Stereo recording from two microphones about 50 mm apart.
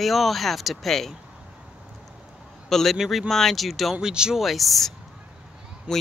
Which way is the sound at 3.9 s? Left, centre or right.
Centre.